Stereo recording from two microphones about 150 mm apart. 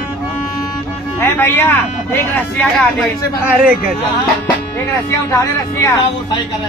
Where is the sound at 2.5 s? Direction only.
Centre (ahead or behind).